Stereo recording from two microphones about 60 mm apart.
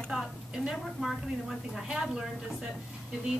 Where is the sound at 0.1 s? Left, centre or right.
Centre.